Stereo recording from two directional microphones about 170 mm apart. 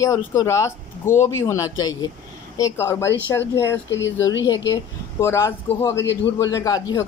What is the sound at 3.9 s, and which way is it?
Speech, 90° left.